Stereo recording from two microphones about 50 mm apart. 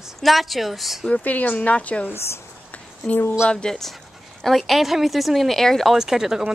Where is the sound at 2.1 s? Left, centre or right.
Left.